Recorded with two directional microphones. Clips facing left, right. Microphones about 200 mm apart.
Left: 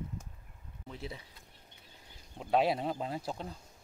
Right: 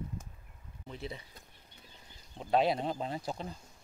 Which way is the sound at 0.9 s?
Centre (ahead or behind).